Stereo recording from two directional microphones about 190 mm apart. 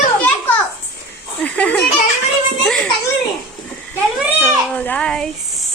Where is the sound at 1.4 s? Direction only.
5° left (ahead or behind).